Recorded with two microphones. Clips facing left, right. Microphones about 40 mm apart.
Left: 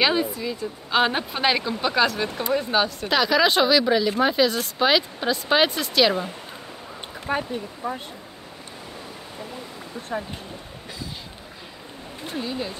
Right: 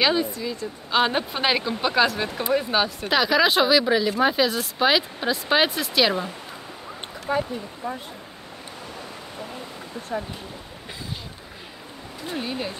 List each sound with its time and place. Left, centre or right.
0.0 s speech: centre
7.3 s speech: left
12.3 s speech: right